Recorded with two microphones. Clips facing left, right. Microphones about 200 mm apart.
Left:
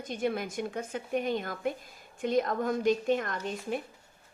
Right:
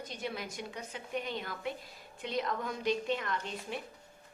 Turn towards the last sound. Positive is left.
turn(degrees=45)  # may be behind; listen again after turning